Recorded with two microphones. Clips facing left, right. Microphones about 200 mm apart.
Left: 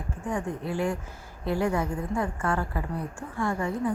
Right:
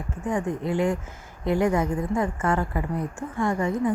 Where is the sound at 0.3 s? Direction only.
20° right (ahead or behind).